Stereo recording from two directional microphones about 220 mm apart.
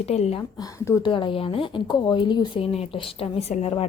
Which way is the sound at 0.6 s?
15° left (ahead or behind).